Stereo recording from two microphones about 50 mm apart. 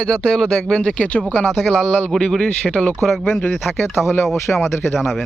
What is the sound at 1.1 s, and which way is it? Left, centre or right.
Speech, left.